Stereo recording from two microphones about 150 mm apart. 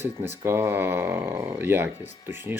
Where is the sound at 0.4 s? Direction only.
15° right (ahead or behind).